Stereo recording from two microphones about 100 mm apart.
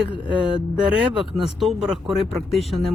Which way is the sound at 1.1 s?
Centre (ahead or behind).